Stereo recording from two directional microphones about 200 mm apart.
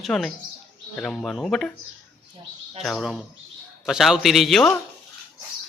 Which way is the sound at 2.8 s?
Centre (ahead or behind).